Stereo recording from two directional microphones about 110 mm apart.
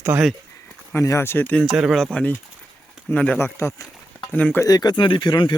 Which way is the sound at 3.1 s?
10° left (ahead or behind).